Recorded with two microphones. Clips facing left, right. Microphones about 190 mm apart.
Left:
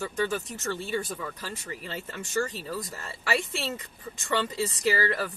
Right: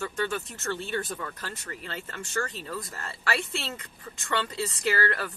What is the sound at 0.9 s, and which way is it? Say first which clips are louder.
Speech: left 1 dB; 5° left (ahead or behind).